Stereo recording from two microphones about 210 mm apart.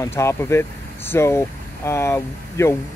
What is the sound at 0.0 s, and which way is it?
Speech, 10° left (ahead or behind).